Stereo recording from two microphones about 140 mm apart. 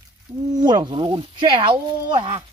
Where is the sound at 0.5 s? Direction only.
30° right (ahead or behind).